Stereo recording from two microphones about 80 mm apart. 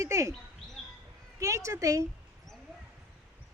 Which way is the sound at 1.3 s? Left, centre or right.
Right.